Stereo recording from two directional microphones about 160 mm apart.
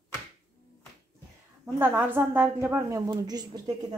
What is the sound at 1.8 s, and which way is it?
A woman's voice, 10° right (ahead or behind).